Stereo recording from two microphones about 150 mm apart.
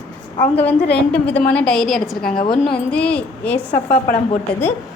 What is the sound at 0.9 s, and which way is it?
A woman's voice, 10° left (ahead or behind).